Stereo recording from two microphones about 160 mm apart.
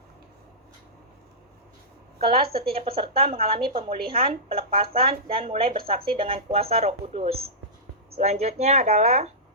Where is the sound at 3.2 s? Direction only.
35° right (ahead or behind).